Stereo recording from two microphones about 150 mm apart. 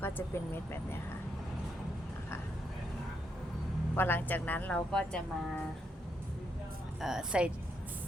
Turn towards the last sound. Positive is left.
turn(degrees=-5)  # may be behind; listen again after turning